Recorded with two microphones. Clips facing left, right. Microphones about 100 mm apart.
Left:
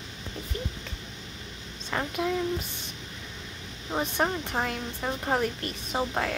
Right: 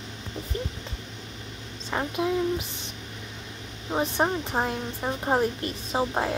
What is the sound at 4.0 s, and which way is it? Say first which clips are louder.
Speech: right 3 dB; 20° right (ahead or behind).